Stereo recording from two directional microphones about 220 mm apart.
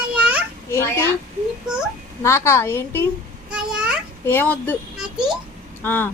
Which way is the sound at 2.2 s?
10° left (ahead or behind).